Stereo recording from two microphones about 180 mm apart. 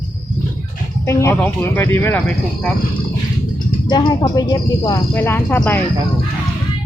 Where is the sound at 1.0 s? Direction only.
15° left (ahead or behind).